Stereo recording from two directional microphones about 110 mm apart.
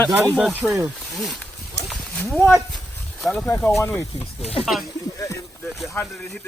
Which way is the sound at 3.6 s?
25° left (ahead or behind).